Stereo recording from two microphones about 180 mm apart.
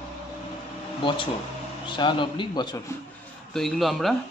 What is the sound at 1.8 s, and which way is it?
Speech, 25° left (ahead or behind).